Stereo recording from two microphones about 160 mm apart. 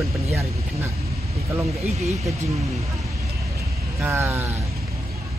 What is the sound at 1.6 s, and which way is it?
Speech, centre (ahead or behind).